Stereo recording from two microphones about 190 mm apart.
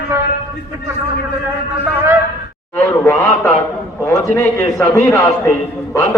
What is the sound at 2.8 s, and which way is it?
A man's voice, 10° left (ahead or behind).